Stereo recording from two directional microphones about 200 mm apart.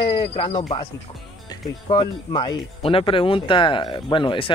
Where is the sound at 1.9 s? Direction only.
25° left (ahead or behind).